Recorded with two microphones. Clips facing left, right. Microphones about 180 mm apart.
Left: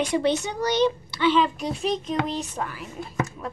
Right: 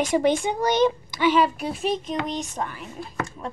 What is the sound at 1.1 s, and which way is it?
Speech, 10° right (ahead or behind).